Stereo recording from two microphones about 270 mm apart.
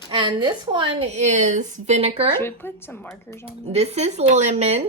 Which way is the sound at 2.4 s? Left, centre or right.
Centre.